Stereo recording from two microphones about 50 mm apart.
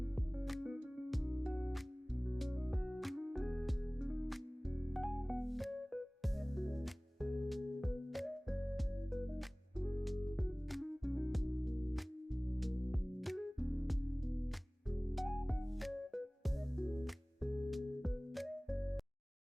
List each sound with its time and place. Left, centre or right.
1.3 s music: centre
2.3 s music: centre
4.9 s music: centre
14.8 s music: centre